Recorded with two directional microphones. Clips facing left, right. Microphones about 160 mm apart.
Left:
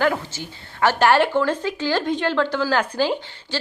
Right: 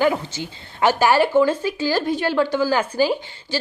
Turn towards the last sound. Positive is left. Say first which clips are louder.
# right 2 dB
turn(degrees=-10)  # may be behind; listen again after turning